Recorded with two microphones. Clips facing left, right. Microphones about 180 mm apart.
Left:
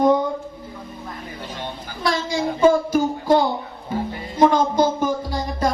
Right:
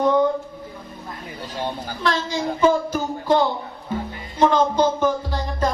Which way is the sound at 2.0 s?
10° left (ahead or behind).